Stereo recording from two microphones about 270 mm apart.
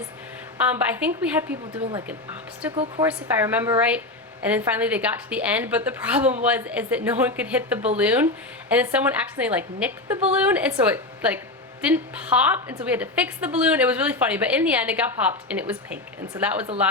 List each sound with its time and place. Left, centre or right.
0.7 s a woman's voice: centre
1.8 s speech: centre
2.0 s a woman's voice: centre
2.7 s a woman's voice: centre
3.1 s a woman's voice: centre